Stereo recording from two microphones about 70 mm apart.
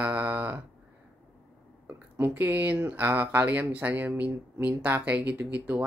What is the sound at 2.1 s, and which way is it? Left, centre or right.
Speech, right.